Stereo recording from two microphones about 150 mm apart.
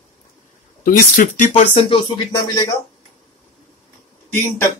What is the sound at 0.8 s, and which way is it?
Speech, 60° left (ahead or behind).